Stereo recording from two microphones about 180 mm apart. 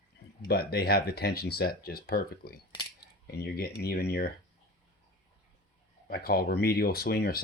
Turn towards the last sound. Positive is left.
turn(degrees=60)  # may be behind; listen again after turning